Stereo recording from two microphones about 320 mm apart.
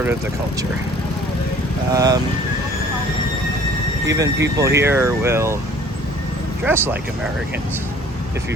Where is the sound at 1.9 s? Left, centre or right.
Centre.